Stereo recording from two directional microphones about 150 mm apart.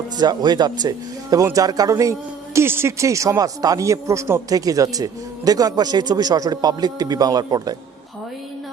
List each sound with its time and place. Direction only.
0.2 s a man's voice: 30° right (ahead or behind)